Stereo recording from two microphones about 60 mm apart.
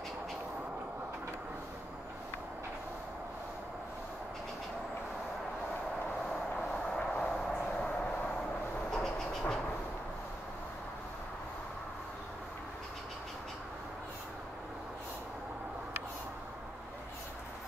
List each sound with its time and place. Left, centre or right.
6.5 s vehicle: centre
8.9 s train: centre